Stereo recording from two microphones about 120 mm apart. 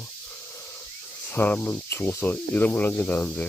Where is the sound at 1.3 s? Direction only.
15° left (ahead or behind).